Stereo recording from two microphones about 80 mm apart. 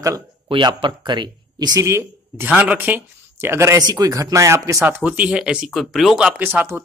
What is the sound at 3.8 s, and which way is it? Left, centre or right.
Speech, right.